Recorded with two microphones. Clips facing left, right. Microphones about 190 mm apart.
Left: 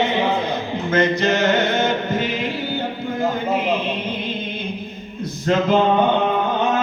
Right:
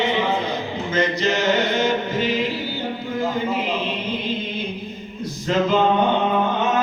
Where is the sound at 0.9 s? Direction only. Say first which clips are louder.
Left 3 dB; 55° left (ahead or behind).